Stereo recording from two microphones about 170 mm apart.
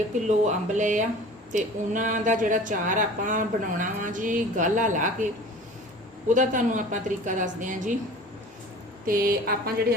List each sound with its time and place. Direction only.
0.3 s speech: 45° right (ahead or behind)
9.0 s speech: 55° right (ahead or behind)